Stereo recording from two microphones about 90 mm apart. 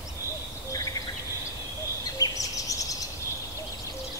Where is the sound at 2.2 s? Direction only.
40° left (ahead or behind).